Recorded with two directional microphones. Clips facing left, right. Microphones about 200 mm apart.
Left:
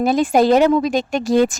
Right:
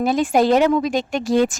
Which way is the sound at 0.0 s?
40° left (ahead or behind).